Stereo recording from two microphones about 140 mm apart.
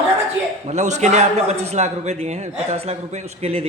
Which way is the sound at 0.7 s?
55° right (ahead or behind).